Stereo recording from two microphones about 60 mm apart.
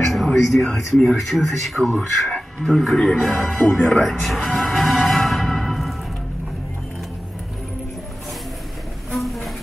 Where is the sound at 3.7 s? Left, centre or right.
Centre.